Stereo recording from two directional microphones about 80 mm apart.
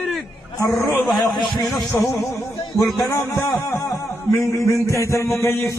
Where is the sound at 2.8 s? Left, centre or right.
Left.